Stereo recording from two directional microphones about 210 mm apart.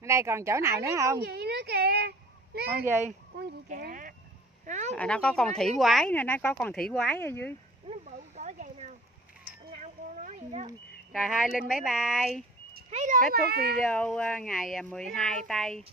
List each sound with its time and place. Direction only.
0.0 s speech: 15° right (ahead or behind)
1.2 s a child's voice: 50° right (ahead or behind)
2.7 s speech: 10° right (ahead or behind)
3.3 s speech: 40° right (ahead or behind)
4.9 s speech: 5° left (ahead or behind)
7.9 s a sound: 35° right (ahead or behind)
11.7 s speech: centre (ahead or behind)
12.9 s speech: 35° right (ahead or behind)
13.3 s speech: 50° right (ahead or behind)
13.7 s speech: 5° left (ahead or behind)